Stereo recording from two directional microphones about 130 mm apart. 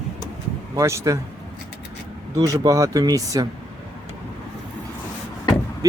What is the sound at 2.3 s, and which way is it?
Speech, 25° right (ahead or behind).